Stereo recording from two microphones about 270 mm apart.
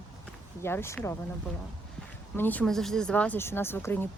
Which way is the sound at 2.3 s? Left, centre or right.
Centre.